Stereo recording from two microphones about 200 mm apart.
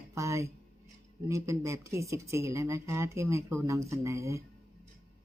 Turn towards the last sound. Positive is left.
turn(degrees=-15)  # may be behind; listen again after turning